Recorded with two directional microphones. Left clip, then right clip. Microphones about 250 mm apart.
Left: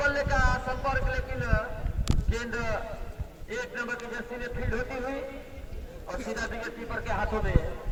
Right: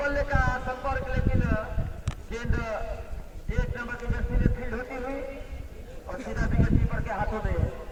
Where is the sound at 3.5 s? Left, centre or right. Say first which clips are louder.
Left 2 dB; left.